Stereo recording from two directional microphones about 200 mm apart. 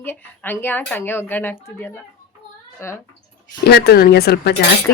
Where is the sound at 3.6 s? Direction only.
50° left (ahead or behind).